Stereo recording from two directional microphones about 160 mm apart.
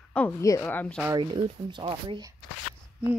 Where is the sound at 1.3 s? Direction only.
30° right (ahead or behind).